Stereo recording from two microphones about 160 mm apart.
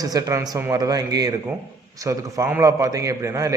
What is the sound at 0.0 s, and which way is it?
A man's voice, 25° right (ahead or behind).